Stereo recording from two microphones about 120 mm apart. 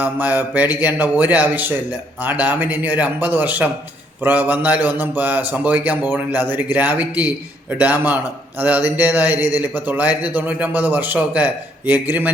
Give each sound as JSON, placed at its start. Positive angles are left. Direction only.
{"t": 0.0, "sound": "a man's voice", "side_deg": -15}